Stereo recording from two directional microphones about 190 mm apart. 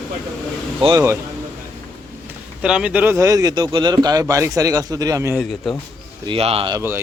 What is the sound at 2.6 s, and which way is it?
Speech, 5° right (ahead or behind).